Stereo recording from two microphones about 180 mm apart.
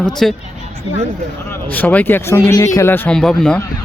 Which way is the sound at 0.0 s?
Centre (ahead or behind).